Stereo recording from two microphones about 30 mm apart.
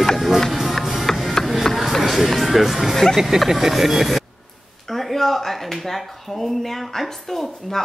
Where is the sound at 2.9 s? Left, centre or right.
Centre.